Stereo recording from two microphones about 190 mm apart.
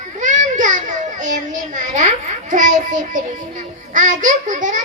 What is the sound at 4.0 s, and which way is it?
Speech, 40° right (ahead or behind).